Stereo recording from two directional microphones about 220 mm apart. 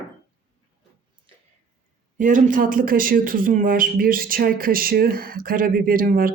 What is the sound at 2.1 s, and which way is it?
Speech, 35° right (ahead or behind).